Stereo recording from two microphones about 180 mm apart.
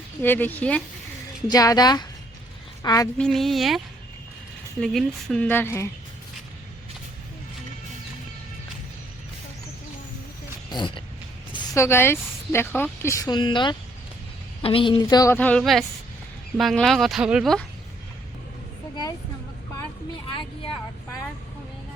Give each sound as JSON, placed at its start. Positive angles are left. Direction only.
{"t": 0.2, "sound": "speech", "side_deg": 10}
{"t": 1.5, "sound": "speech", "side_deg": 20}
{"t": 3.2, "sound": "speech", "side_deg": 0}
{"t": 4.8, "sound": "speech", "side_deg": 0}
{"t": 10.7, "sound": "speech", "side_deg": 25}
{"t": 11.5, "sound": "speech", "side_deg": 15}
{"t": 20.2, "sound": "speech", "side_deg": 25}